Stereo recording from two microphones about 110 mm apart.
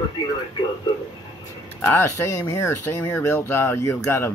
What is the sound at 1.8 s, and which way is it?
Speech, 25° left (ahead or behind).